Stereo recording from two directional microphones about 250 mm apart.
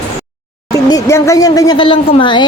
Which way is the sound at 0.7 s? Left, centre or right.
Centre.